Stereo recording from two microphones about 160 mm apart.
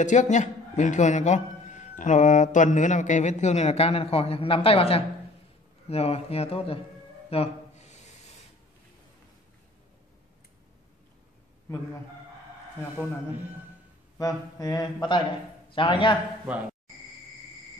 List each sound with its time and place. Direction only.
0.0 s speech: 50° left (ahead or behind)
7.2 s music: 40° left (ahead or behind)
14.1 s speech: 20° left (ahead or behind)